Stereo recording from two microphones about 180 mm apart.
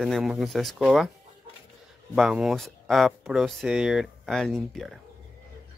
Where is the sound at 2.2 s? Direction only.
5° right (ahead or behind).